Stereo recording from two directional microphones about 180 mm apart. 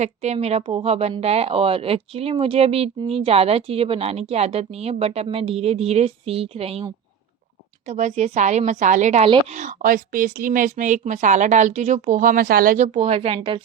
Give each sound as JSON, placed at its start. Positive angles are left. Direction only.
{"t": 0.0, "sound": "speech", "side_deg": -40}
{"t": 7.9, "sound": "a woman's voice", "side_deg": -40}